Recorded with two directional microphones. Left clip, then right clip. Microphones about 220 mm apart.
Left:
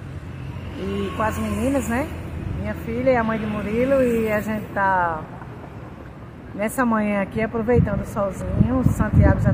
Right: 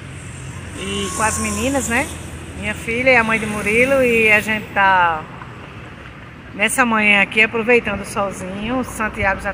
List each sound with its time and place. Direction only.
1.1 s speech: 20° right (ahead or behind)
6.6 s speech: 10° right (ahead or behind)